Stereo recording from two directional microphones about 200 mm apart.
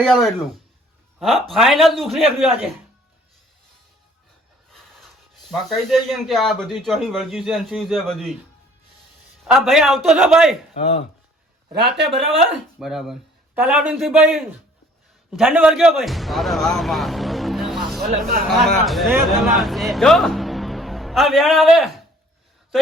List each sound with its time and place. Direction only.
0.0 s a man's voice: centre (ahead or behind)
4.7 s a sound: centre (ahead or behind)
6.7 s a man's voice: centre (ahead or behind)
9.4 s a man's voice: centre (ahead or behind)
10.8 s speech: 35° left (ahead or behind)
11.7 s speech: 55° right (ahead or behind)
12.8 s a man's voice: centre (ahead or behind)